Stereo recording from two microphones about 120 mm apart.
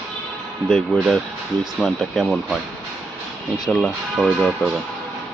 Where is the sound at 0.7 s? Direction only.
Centre (ahead or behind).